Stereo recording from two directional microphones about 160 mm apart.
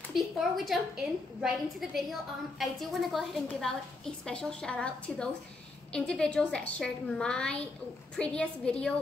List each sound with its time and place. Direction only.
0.1 s a woman's voice: centre (ahead or behind)